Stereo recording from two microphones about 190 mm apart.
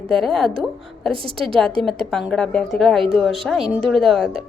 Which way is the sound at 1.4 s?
5° left (ahead or behind).